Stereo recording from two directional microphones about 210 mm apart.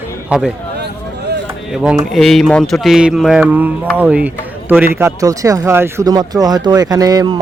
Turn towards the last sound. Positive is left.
turn(degrees=-20)  # may be behind; listen again after turning